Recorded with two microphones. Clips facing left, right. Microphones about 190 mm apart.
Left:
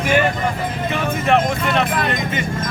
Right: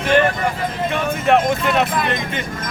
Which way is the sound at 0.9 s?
Centre (ahead or behind).